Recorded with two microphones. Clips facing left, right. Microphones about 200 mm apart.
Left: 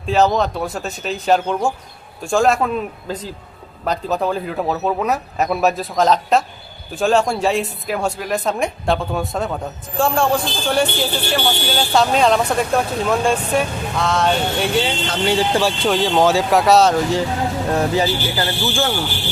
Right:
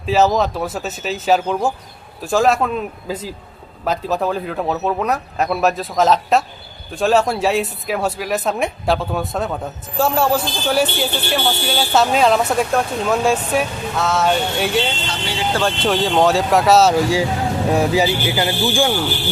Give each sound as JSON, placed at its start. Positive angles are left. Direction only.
{"t": 0.0, "sound": "a man's voice", "side_deg": -5}
{"t": 15.0, "sound": "speech", "side_deg": 50}
{"t": 15.8, "sound": "a man's voice", "side_deg": 0}